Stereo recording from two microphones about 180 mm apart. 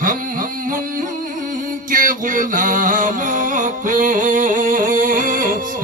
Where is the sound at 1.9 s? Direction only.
50° right (ahead or behind).